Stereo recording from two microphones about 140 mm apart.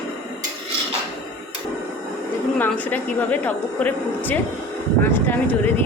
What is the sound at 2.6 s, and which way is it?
A woman's voice, 10° left (ahead or behind).